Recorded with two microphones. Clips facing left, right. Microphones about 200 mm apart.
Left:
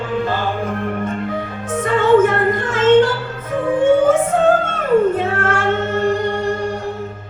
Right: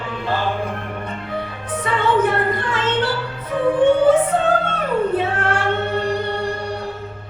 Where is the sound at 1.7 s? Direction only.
45° left (ahead or behind).